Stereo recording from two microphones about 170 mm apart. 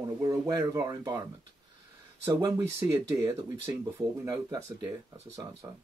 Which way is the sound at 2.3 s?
20° right (ahead or behind).